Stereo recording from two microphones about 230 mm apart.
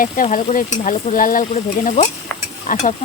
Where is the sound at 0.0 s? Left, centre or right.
Left.